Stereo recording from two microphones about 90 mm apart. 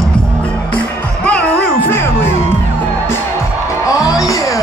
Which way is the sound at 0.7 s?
15° left (ahead or behind).